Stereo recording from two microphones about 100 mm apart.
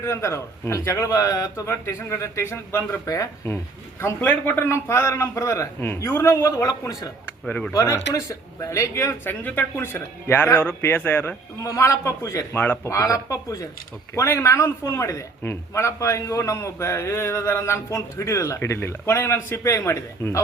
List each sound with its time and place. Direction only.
0.0 s a man's voice: 30° left (ahead or behind)
4.2 s a man's voice: 15° left (ahead or behind); by 7.1 s 35° left (ahead or behind)
7.4 s speech: 10° left (ahead or behind)
7.7 s speech: 30° left (ahead or behind)
9.4 s a man's voice: 20° left (ahead or behind)
11.6 s speech: 30° left (ahead or behind)
12.5 s speech: 15° left (ahead or behind)
12.8 s a man's voice: 35° left (ahead or behind)